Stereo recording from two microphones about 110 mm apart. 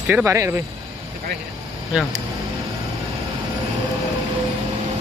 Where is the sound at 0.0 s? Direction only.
20° right (ahead or behind).